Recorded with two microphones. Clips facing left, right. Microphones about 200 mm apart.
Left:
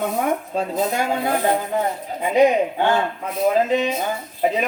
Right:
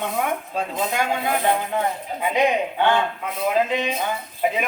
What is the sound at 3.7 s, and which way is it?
Speech, 40° left (ahead or behind).